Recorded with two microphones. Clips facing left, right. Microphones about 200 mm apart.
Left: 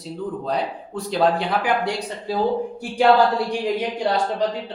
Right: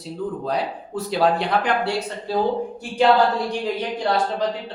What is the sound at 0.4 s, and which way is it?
Speech, centre (ahead or behind).